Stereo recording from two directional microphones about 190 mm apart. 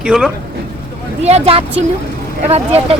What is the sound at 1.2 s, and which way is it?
Speech, 35° right (ahead or behind).